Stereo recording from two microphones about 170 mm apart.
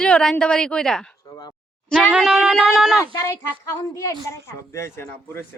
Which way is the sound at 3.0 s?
20° left (ahead or behind).